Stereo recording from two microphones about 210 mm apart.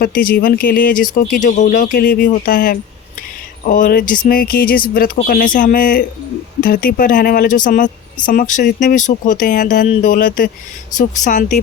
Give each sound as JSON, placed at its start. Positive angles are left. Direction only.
{"t": 0.0, "sound": "speech", "side_deg": 45}